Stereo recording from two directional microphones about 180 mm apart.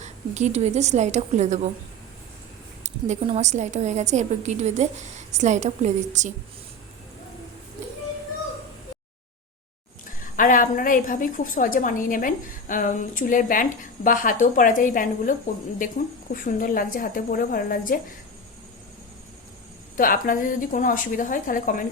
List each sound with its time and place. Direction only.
0.0 s a woman's voice: 40° right (ahead or behind)
2.8 s a woman's voice: 40° right (ahead or behind)
10.3 s a woman's voice: 50° left (ahead or behind)
20.0 s a woman's voice: 50° left (ahead or behind)